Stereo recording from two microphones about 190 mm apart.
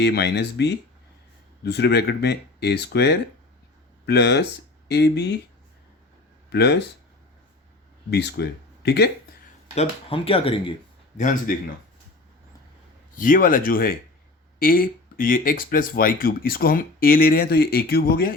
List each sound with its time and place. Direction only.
0.0 s speech: 60° left (ahead or behind)
6.5 s speech: 60° left (ahead or behind)
8.1 s speech: 60° left (ahead or behind)
9.7 s speech: 30° left (ahead or behind)
13.1 s speech: 45° left (ahead or behind)